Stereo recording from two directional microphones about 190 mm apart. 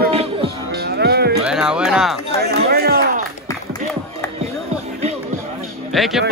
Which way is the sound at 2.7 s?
55° right (ahead or behind).